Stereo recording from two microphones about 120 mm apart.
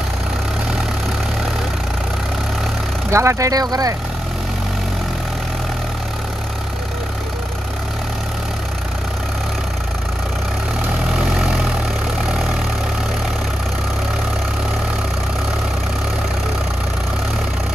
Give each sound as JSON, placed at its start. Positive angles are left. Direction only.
{"t": 3.1, "sound": "speech", "side_deg": -25}
{"t": 11.3, "sound": "vehicle", "side_deg": -5}